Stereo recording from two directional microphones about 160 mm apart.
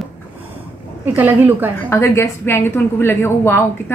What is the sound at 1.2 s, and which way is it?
Speech, 10° right (ahead or behind).